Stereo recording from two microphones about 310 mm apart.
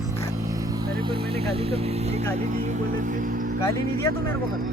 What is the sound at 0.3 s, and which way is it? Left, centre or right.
Vehicle, centre.